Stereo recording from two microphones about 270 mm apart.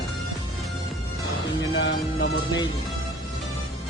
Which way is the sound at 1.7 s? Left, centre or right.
Left.